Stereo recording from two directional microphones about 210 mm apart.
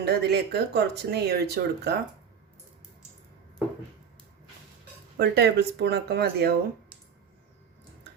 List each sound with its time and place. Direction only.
0.0 s speech: 50° right (ahead or behind)
5.1 s speech: 50° right (ahead or behind)